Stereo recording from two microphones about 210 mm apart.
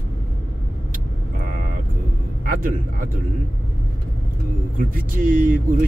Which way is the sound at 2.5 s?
40° right (ahead or behind).